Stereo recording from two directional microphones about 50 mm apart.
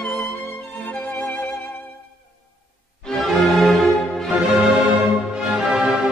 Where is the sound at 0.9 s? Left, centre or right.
Left.